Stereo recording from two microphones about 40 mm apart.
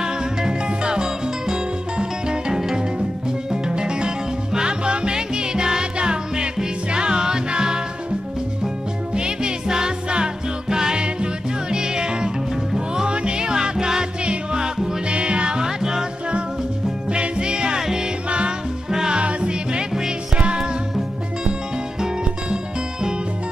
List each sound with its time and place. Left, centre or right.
0.0 s music: centre
9.1 s music: right
17.1 s music: right
22.0 s music: right